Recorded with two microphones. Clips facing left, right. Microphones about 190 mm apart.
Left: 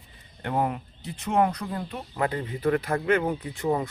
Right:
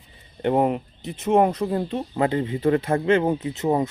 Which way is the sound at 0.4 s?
20° right (ahead or behind).